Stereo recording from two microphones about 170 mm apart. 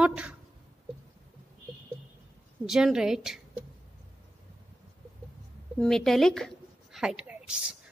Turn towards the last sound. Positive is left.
turn(degrees=-5)  # may be behind; listen again after turning